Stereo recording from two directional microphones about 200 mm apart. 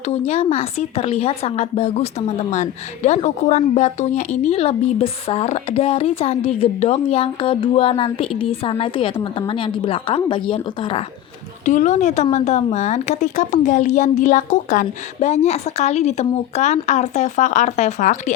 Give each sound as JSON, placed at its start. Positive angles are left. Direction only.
{"t": 0.1, "sound": "a woman's voice", "side_deg": 30}
{"t": 11.6, "sound": "speech", "side_deg": 35}